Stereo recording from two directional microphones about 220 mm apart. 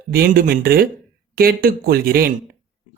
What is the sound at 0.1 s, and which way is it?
Speech, 45° right (ahead or behind).